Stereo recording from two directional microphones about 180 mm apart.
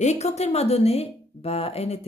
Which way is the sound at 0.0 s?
40° left (ahead or behind).